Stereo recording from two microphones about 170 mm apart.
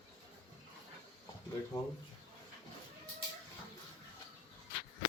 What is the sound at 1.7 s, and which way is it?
Speech, 20° left (ahead or behind).